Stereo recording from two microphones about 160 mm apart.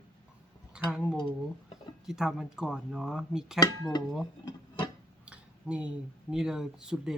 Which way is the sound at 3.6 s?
25° left (ahead or behind).